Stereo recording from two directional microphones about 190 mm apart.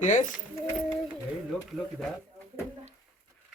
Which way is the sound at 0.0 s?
40° left (ahead or behind).